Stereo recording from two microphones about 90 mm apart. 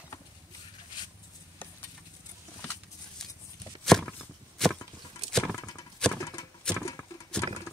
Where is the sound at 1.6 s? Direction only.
20° left (ahead or behind).